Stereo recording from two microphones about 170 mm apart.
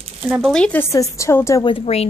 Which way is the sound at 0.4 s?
5° left (ahead or behind).